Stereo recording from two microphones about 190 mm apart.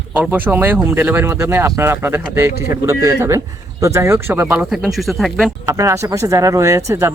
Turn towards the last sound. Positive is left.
turn(degrees=-15)  # may be behind; listen again after turning